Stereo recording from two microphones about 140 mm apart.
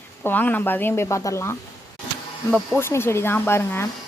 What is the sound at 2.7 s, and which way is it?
Speech, 15° left (ahead or behind).